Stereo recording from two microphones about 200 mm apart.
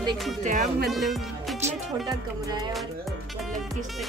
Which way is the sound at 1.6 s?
20° right (ahead or behind).